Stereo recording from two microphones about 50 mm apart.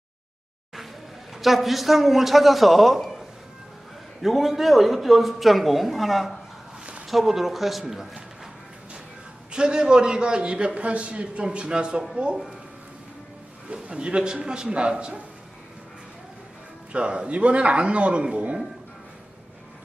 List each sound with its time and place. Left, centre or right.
1.4 s a man's voice: centre
4.2 s a man's voice: centre
9.5 s a man's voice: centre
13.7 s a man's voice: centre
16.9 s a man's voice: right